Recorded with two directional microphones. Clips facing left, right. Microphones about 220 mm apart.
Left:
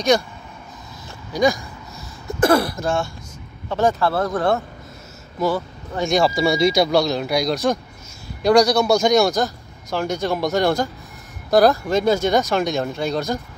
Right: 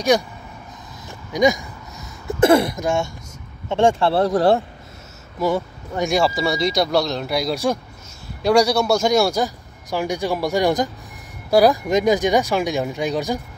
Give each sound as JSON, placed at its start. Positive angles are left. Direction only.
{"t": 1.3, "sound": "speech", "side_deg": -20}
{"t": 5.4, "sound": "a man's voice", "side_deg": -15}